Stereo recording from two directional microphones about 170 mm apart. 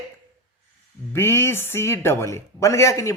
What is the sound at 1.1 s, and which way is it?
Speech, 15° left (ahead or behind).